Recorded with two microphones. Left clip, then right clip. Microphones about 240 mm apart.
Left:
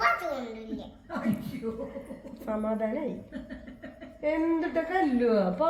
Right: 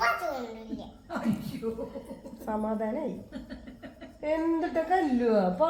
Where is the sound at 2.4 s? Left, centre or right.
Centre.